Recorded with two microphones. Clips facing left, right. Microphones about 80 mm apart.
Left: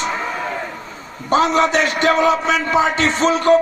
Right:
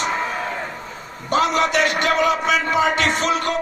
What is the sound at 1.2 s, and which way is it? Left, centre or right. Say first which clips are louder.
Speech: left 3 dB; left.